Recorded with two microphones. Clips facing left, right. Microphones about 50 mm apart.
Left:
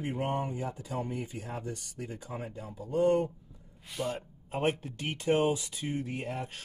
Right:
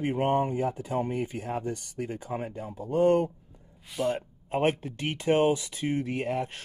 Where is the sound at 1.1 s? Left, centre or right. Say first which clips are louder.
Right 7 dB; right.